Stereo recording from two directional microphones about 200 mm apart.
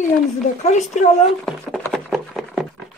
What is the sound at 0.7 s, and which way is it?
Speech, 35° left (ahead or behind).